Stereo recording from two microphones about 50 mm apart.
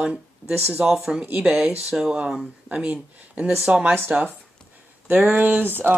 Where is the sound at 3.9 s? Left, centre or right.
Right.